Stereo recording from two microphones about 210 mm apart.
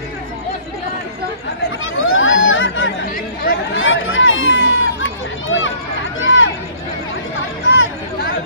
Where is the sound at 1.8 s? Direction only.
70° left (ahead or behind).